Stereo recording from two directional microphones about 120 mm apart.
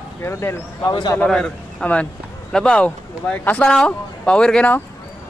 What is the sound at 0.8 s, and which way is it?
Speech, 35° left (ahead or behind).